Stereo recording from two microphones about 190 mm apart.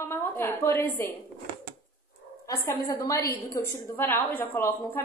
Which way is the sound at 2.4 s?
15° left (ahead or behind).